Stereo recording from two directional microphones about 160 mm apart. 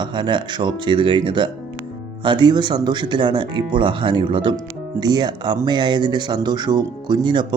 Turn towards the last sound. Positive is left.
turn(degrees=-30)  # may be behind; listen again after turning